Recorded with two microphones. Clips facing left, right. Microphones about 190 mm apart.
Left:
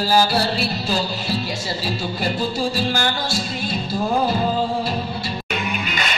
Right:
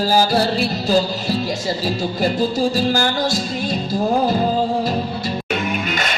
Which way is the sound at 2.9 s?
40° right (ahead or behind).